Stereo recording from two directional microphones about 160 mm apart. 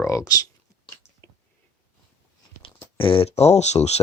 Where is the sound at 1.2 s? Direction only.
15° left (ahead or behind).